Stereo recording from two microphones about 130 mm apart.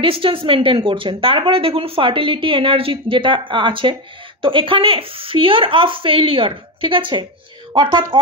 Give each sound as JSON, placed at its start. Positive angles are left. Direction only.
{"t": 0.0, "sound": "speech", "side_deg": -45}